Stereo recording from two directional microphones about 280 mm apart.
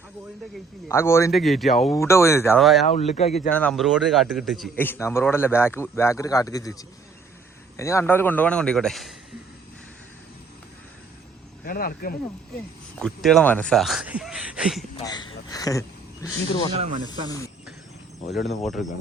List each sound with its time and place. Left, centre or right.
0.9 s a man's voice: centre
2.8 s speech: left
3.5 s a man's voice: centre
11.6 s speech: left
13.0 s speech: centre
14.9 s a man's voice: centre
18.4 s speech: centre